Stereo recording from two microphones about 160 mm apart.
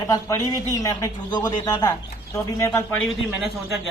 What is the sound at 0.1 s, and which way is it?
A man's voice, 20° left (ahead or behind).